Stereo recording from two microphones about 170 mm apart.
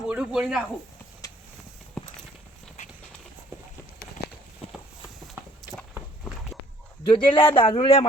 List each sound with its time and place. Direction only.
0.0 s speech: 5° right (ahead or behind)
2.0 s clip-clop: 5° left (ahead or behind)
4.2 s clip-clop: 70° left (ahead or behind)
4.6 s clip-clop: 35° left (ahead or behind)
7.0 s speech: 30° left (ahead or behind)